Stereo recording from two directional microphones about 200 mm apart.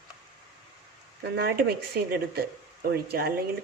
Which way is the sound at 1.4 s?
50° right (ahead or behind).